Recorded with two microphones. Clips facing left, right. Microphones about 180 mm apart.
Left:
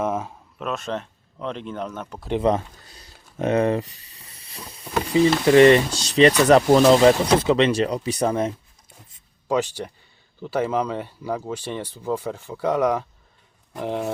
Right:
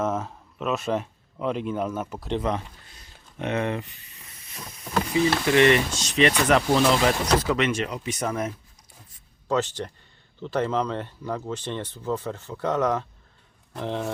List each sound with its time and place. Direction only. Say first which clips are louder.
0.0 s a sound: left 2 dB; 10° left (ahead or behind)
0.6 s speech: right 2 dB; 5° right (ahead or behind)
2.4 s a sound: left 7 dB; 35° left (ahead or behind)
5.0 s speech: left 6 dB; 35° left (ahead or behind)
7.3 s speech: left 5 dB; 30° left (ahead or behind)
9.5 s speech: left 2 dB; 10° left (ahead or behind)